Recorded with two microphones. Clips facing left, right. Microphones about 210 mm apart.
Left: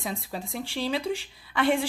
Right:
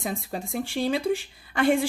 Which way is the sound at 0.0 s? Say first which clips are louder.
Right 3 dB; 50° right (ahead or behind).